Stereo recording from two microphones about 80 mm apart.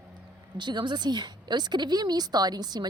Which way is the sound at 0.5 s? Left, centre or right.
Right.